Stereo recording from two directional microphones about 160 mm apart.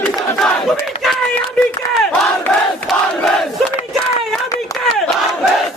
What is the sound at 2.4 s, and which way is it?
Crowd, centre (ahead or behind).